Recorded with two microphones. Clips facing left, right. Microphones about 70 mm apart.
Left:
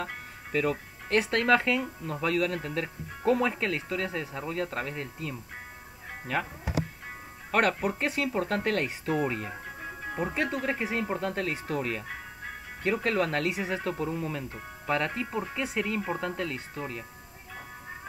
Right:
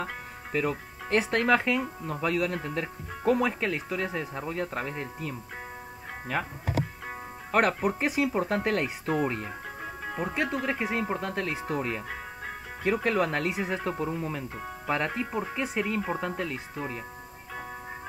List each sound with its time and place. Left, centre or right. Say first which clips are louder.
0.0 s speech: right 2 dB; centre
7.5 s speech: right 1 dB; centre